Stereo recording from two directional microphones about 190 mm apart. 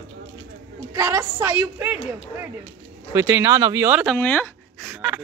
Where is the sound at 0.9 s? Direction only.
15° right (ahead or behind).